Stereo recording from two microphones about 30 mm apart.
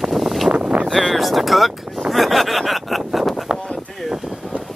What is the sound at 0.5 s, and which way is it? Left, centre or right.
Vehicle, right.